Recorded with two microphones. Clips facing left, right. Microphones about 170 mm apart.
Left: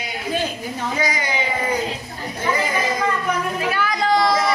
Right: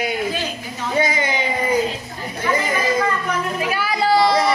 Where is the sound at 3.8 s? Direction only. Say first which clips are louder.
Right 2 dB; 5° right (ahead or behind).